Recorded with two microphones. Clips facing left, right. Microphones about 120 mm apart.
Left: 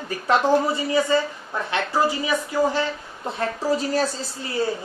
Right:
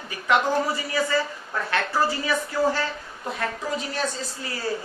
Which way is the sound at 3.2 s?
30° left (ahead or behind).